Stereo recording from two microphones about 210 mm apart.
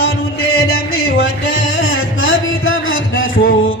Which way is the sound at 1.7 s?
70° left (ahead or behind).